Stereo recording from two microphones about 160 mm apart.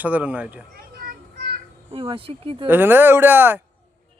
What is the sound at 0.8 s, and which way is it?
Children playing, 65° right (ahead or behind).